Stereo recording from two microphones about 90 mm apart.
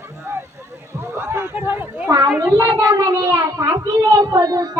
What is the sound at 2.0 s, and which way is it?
Speech, 45° right (ahead or behind).